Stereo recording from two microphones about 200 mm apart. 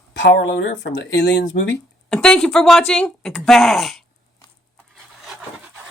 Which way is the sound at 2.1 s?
5° left (ahead or behind).